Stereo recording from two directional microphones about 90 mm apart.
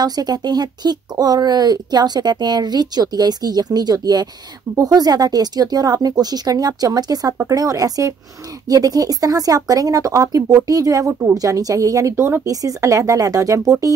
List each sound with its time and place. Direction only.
0.0 s speech: 50° right (ahead or behind)